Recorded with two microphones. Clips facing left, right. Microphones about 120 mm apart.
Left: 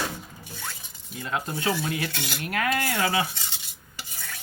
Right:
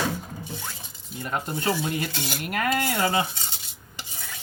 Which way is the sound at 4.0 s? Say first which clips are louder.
Even; 15° right (ahead or behind).